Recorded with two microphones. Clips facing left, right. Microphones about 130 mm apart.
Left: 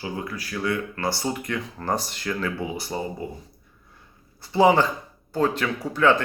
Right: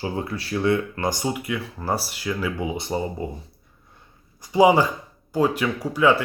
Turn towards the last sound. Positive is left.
turn(degrees=-10)  # may be behind; listen again after turning